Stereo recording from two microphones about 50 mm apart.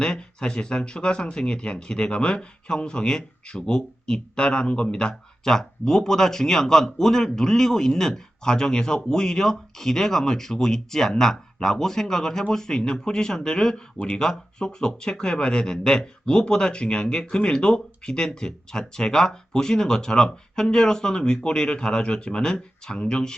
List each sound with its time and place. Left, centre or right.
0.0 s speech: centre